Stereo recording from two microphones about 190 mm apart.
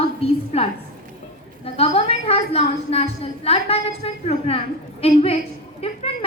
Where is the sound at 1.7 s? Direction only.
30° left (ahead or behind).